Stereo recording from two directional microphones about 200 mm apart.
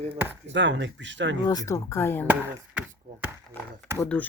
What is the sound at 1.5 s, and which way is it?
Speech, 15° left (ahead or behind).